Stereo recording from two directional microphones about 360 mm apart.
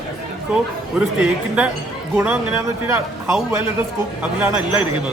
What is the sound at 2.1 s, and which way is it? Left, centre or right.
A man's voice, centre.